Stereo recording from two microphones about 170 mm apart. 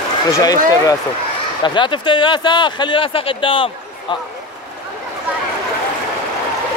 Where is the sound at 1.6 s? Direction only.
30° left (ahead or behind).